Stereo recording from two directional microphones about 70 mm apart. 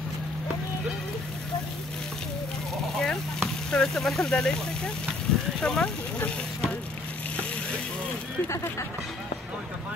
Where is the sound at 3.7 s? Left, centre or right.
Centre.